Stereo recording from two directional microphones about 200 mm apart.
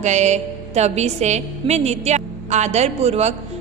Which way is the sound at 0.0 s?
35° right (ahead or behind).